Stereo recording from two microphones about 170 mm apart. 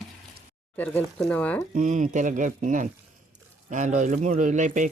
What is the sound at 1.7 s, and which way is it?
Speech, 45° right (ahead or behind).